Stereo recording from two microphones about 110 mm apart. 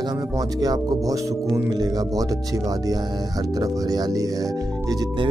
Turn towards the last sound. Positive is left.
turn(degrees=-35)  # may be behind; listen again after turning